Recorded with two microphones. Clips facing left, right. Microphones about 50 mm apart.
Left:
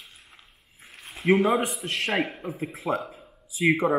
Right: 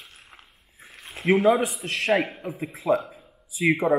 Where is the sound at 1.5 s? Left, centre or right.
Centre.